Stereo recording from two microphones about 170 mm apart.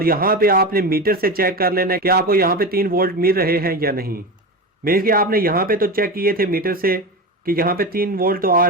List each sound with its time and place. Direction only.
0.0 s speech: 60° right (ahead or behind)